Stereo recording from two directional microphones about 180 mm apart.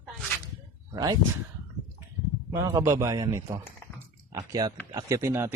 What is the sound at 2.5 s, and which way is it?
Speech, 15° right (ahead or behind).